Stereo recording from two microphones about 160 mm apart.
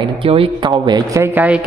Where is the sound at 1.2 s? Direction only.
10° right (ahead or behind).